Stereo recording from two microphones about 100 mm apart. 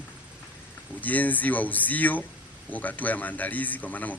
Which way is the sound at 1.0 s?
15° left (ahead or behind).